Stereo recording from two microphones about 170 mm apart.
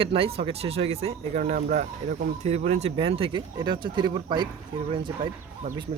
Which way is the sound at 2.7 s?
40° right (ahead or behind).